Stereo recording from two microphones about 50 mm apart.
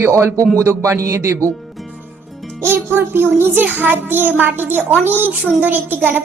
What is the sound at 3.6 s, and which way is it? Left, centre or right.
A child's voice, right.